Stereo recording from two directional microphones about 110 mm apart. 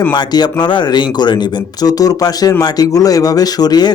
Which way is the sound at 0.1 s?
40° left (ahead or behind).